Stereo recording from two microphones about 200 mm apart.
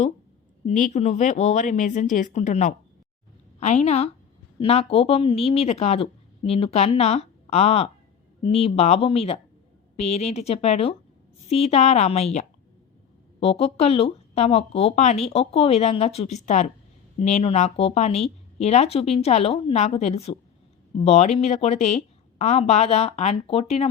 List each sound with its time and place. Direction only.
0.7 s speech: 35° left (ahead or behind)